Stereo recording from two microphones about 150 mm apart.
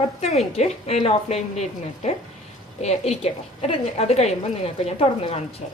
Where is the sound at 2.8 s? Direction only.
45° left (ahead or behind).